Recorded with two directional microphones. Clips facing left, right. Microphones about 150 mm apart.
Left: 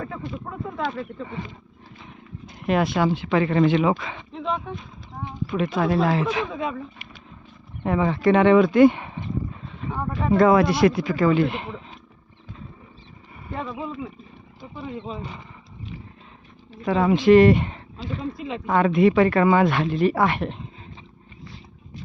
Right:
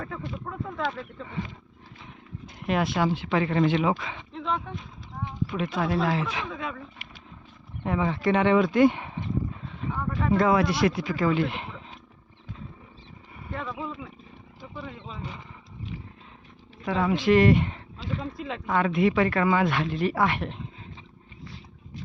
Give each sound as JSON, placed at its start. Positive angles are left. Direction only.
{"t": 0.0, "sound": "speech", "side_deg": 5}
{"t": 2.6, "sound": "speech", "side_deg": 50}
{"t": 4.4, "sound": "speech", "side_deg": 15}
{"t": 5.5, "sound": "speech", "side_deg": 45}
{"t": 6.5, "sound": "speech", "side_deg": 20}
{"t": 7.9, "sound": "speech", "side_deg": 60}
{"t": 10.3, "sound": "speech", "side_deg": 50}
{"t": 13.5, "sound": "speech", "side_deg": 20}
{"t": 16.8, "sound": "speech", "side_deg": 45}
{"t": 17.1, "sound": "speech", "side_deg": 25}
{"t": 18.3, "sound": "speech", "side_deg": 5}
{"t": 18.6, "sound": "speech", "side_deg": 40}